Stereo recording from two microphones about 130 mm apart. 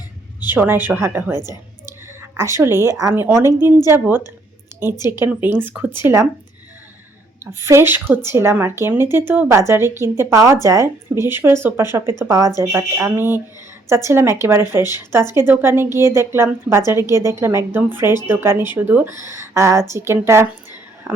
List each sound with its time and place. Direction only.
0.4 s a woman's voice: 15° right (ahead or behind)
4.9 s speech: 30° left (ahead or behind)
5.2 s a woman's voice: 15° right (ahead or behind)
7.6 s a woman's voice: 20° right (ahead or behind)